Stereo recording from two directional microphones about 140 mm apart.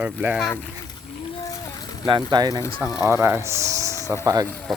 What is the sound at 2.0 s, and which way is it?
Speech, 30° right (ahead or behind).